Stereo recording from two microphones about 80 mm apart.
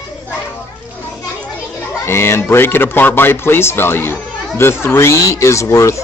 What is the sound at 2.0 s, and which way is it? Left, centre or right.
Speech, left.